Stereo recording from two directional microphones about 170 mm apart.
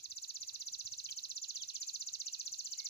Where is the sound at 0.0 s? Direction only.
75° left (ahead or behind).